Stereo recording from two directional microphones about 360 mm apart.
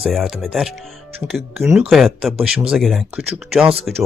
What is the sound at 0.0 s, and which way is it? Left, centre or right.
Speech, centre.